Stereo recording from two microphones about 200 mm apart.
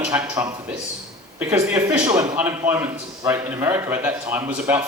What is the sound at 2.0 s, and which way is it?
A man's voice, 15° right (ahead or behind).